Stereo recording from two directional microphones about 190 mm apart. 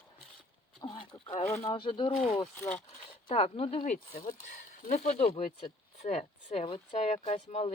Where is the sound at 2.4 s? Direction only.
10° left (ahead or behind).